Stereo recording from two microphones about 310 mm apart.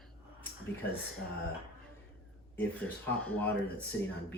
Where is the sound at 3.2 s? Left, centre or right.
Centre.